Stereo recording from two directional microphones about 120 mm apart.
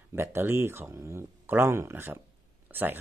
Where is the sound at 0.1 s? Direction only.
20° right (ahead or behind).